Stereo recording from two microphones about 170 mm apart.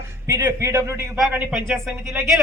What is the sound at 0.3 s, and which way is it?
A man's voice, 20° right (ahead or behind).